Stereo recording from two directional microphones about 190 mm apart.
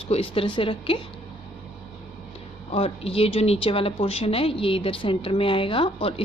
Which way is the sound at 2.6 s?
30° left (ahead or behind).